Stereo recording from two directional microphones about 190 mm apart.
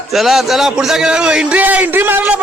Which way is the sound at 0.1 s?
Centre (ahead or behind).